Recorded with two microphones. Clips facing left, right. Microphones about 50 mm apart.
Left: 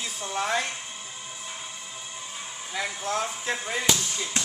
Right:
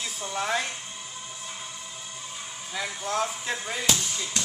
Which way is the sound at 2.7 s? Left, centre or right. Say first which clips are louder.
Even; centre.